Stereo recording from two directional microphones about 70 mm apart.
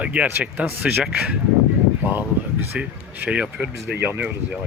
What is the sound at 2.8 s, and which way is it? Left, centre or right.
Speech, centre.